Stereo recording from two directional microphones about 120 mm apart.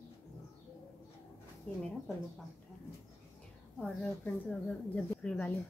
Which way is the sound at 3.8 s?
5° left (ahead or behind).